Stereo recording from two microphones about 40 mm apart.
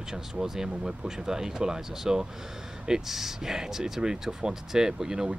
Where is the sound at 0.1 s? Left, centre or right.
Centre.